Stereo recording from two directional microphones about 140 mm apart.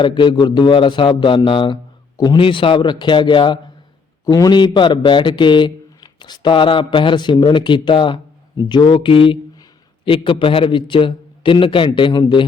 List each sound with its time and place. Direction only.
0.0 s a man's voice: 35° left (ahead or behind)